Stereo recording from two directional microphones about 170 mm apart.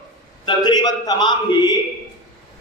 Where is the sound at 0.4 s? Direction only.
25° left (ahead or behind).